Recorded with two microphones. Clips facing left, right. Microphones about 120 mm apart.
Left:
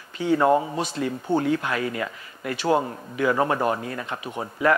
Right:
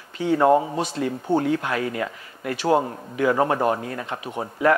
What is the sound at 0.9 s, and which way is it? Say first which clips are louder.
Speech: right 1 dB; 40° right (ahead or behind).